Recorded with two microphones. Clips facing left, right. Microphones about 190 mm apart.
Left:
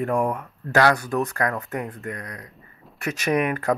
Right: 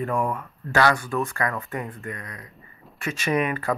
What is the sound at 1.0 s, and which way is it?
Speech, 40° left (ahead or behind).